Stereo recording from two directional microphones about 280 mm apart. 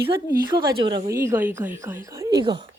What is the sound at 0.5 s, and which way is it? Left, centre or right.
Speech, centre.